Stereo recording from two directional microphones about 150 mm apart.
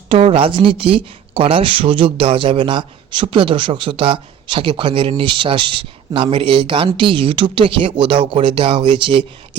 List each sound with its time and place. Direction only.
0.1 s speech: 40° right (ahead or behind)